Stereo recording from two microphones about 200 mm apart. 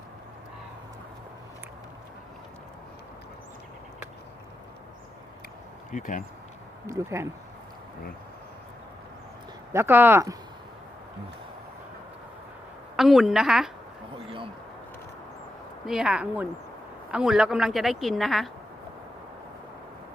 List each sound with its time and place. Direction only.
5.9 s speech: 40° left (ahead or behind)
6.8 s speech: 15° right (ahead or behind)
9.7 s speech: 10° right (ahead or behind)
13.0 s a woman's voice: centre (ahead or behind)
15.9 s a woman's voice: 5° right (ahead or behind)